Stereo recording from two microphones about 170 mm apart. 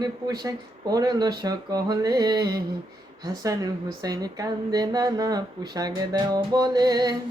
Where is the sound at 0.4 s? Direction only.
20° right (ahead or behind).